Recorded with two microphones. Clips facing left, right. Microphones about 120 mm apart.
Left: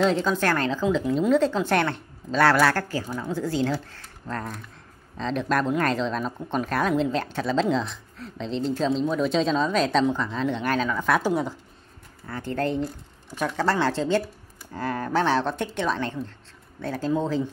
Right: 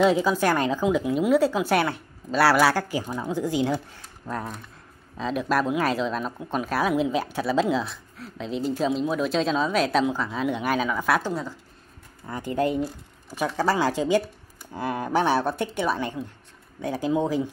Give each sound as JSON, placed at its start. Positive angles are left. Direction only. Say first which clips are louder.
{"t": 0.0, "sound": "speech", "louder": "right 2 dB", "side_deg": -5}
{"t": 11.2, "sound": "speech", "louder": "left 5 dB", "side_deg": 20}
{"t": 12.3, "sound": "speech", "louder": "right 2 dB", "side_deg": -10}